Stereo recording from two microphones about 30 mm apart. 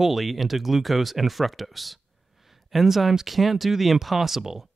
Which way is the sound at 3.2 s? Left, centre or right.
Centre.